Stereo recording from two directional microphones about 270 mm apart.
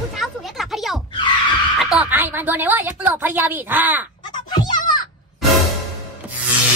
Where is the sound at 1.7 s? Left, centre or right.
Centre.